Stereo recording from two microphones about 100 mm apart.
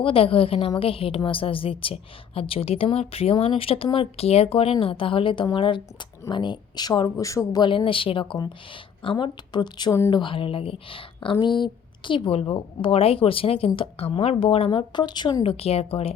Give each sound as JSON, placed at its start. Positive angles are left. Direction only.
{"t": 0.0, "sound": "a woman's voice", "side_deg": 70}
{"t": 7.6, "sound": "speech", "side_deg": 55}
{"t": 15.4, "sound": "a woman's voice", "side_deg": 80}